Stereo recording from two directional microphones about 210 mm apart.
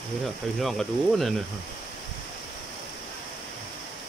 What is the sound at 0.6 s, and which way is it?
Speech, centre (ahead or behind).